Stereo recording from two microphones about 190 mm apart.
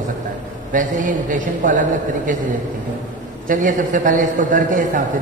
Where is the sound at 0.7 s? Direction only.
40° right (ahead or behind).